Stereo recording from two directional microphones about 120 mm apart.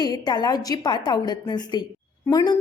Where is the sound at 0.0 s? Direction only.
35° left (ahead or behind).